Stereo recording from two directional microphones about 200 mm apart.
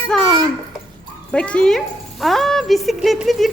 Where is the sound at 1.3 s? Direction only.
5° left (ahead or behind).